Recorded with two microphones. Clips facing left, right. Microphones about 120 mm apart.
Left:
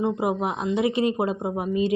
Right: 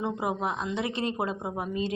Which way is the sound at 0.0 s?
10° left (ahead or behind).